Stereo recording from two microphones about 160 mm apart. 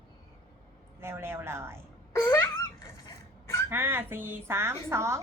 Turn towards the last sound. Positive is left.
turn(degrees=-15)  # may be behind; listen again after turning